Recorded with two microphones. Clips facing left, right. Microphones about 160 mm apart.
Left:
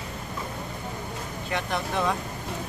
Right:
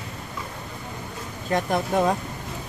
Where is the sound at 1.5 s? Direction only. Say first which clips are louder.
Right 6 dB; 45° right (ahead or behind).